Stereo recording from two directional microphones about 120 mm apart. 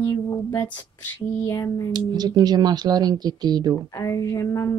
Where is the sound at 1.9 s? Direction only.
35° right (ahead or behind).